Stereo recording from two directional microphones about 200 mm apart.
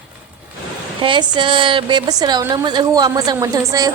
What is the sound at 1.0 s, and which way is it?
A woman's voice, 25° right (ahead or behind).